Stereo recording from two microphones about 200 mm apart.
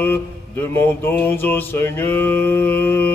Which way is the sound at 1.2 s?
10° left (ahead or behind).